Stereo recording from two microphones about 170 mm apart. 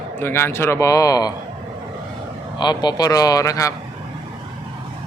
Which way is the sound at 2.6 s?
25° left (ahead or behind).